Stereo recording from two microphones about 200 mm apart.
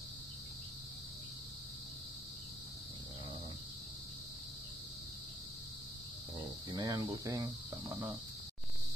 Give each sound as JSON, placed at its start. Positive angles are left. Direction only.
{"t": 6.3, "sound": "speech", "side_deg": -20}